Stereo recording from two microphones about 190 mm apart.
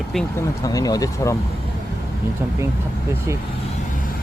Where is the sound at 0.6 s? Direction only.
20° left (ahead or behind).